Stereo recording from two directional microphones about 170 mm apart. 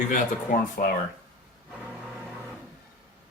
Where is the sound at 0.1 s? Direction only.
55° left (ahead or behind).